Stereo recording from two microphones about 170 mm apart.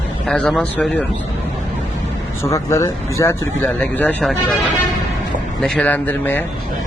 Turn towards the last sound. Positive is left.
turn(degrees=10)  # may be behind; listen again after turning